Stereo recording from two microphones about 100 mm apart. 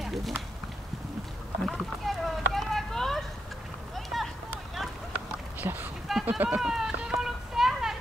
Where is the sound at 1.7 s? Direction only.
Centre (ahead or behind).